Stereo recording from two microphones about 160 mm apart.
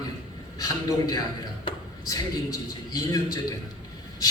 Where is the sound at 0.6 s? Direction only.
25° left (ahead or behind).